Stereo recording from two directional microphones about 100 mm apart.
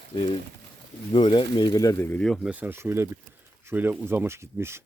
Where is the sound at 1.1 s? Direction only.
55° left (ahead or behind); by 2.0 s 35° left (ahead or behind).